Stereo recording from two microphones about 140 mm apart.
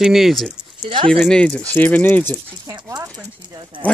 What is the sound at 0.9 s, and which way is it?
Speech, 40° right (ahead or behind).